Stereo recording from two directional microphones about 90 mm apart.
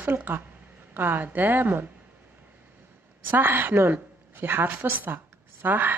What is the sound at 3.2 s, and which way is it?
A woman's voice, 20° right (ahead or behind).